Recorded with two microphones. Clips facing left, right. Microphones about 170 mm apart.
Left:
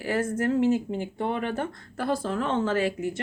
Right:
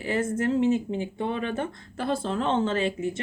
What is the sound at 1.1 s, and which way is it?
Speech, 55° left (ahead or behind).